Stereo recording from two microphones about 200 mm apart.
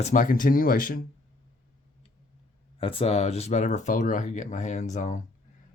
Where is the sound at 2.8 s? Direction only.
30° left (ahead or behind).